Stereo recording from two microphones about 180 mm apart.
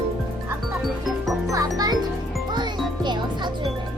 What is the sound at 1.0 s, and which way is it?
Music, centre (ahead or behind).